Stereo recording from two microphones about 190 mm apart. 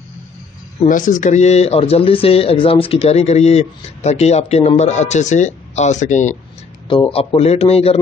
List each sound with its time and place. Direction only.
0.8 s speech: 45° left (ahead or behind)
6.9 s speech: 30° left (ahead or behind)